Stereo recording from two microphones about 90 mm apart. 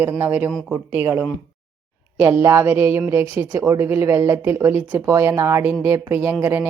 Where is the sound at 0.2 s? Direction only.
20° right (ahead or behind).